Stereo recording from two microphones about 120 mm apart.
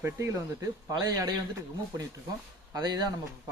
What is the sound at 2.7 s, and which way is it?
Speech, 35° right (ahead or behind).